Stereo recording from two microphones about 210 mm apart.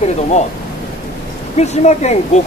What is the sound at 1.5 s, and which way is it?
Speech, 30° left (ahead or behind).